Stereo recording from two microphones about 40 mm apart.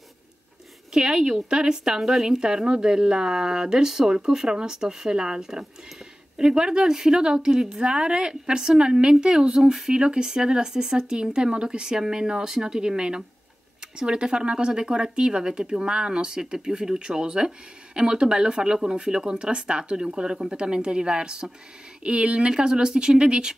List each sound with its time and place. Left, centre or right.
0.9 s speech: centre
2.4 s speech: right